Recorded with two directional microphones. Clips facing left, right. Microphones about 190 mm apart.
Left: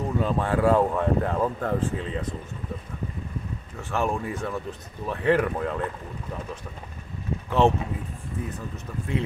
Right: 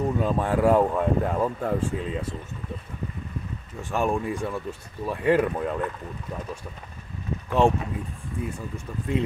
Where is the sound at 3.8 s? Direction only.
15° right (ahead or behind).